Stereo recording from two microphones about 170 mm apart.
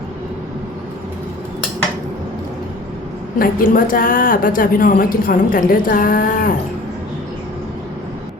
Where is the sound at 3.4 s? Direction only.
55° left (ahead or behind).